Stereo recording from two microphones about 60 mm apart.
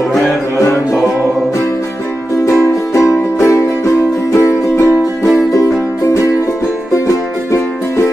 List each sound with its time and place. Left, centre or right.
2.9 s music: left